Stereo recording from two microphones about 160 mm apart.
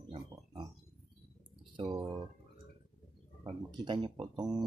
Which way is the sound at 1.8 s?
30° right (ahead or behind).